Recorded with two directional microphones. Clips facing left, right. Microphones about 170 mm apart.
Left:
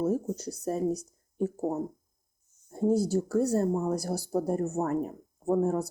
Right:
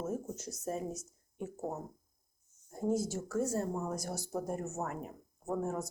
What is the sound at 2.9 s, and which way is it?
Speech, 35° left (ahead or behind).